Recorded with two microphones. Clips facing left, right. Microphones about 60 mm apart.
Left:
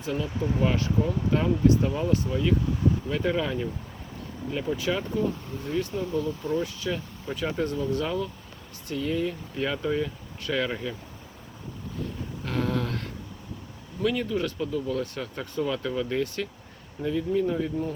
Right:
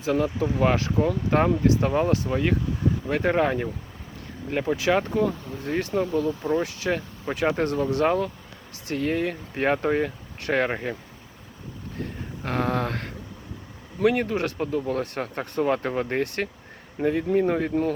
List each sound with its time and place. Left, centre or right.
0.0 s speech: right
12.5 s a sound: right
14.0 s speech: right